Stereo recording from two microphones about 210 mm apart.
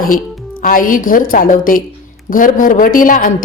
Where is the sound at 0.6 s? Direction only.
40° left (ahead or behind).